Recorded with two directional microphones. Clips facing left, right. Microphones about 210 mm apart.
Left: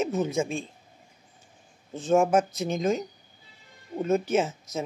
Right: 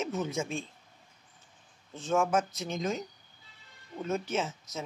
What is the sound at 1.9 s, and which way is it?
Speech, 45° left (ahead or behind).